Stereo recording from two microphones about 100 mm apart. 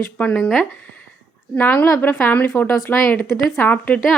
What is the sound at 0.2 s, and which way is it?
Speech, 10° left (ahead or behind).